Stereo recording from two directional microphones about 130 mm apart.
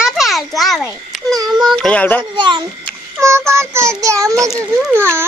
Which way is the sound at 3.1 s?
20° right (ahead or behind).